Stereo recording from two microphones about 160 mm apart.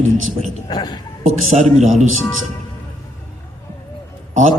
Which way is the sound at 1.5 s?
50° right (ahead or behind).